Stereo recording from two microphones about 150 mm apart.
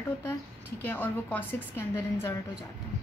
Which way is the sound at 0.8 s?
10° left (ahead or behind).